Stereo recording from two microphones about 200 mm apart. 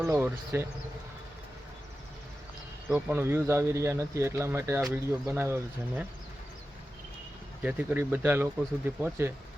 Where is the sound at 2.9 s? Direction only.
10° right (ahead or behind).